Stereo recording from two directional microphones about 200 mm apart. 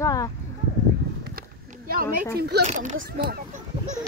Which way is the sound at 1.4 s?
45° right (ahead or behind).